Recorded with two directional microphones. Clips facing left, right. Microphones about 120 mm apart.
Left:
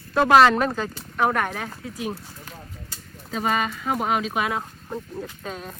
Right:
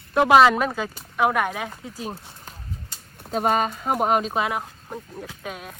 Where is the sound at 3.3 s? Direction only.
45° right (ahead or behind).